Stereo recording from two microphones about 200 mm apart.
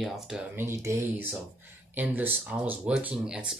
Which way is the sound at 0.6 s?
15° right (ahead or behind).